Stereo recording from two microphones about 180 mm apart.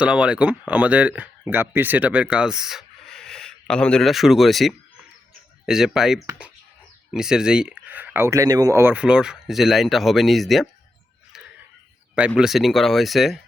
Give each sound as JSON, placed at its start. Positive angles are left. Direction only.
{"t": 0.0, "sound": "speech", "side_deg": -5}
{"t": 12.4, "sound": "speech", "side_deg": 0}